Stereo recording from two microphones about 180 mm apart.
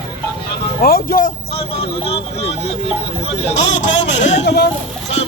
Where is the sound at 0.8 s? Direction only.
55° left (ahead or behind).